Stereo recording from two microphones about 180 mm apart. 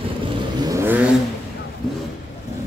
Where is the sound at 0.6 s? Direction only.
15° right (ahead or behind).